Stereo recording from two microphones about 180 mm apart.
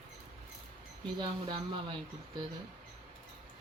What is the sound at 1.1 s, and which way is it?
Speech, 25° right (ahead or behind).